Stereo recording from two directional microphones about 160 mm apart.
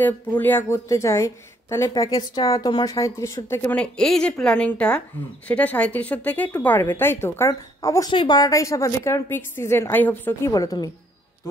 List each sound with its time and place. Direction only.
0.0 s a woman's voice: 10° left (ahead or behind)
10.5 s a woman's voice: 25° left (ahead or behind)